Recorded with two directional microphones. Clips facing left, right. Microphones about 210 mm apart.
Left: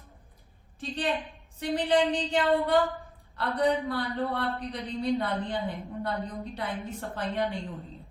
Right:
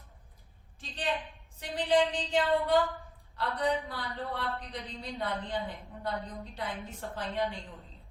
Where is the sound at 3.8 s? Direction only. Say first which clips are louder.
Left 8 dB; 65° left (ahead or behind).